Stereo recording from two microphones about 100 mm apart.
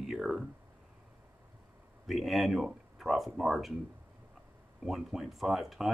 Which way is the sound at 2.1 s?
Centre (ahead or behind).